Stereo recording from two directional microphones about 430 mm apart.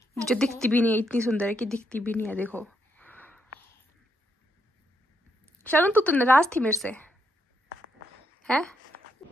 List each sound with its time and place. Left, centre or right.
0.2 s a woman's voice: centre
5.6 s speech: centre
8.4 s speech: centre